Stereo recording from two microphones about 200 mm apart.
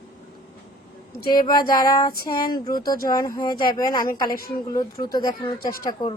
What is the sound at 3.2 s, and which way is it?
Speech, 20° left (ahead or behind).